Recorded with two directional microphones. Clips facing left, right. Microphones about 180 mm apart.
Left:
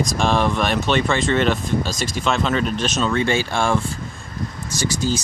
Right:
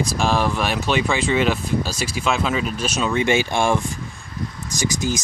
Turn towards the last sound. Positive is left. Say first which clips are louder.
# left 1 dB
turn(degrees=-15)  # may be behind; listen again after turning